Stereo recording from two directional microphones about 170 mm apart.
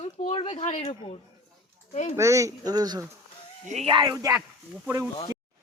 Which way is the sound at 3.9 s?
25° right (ahead or behind).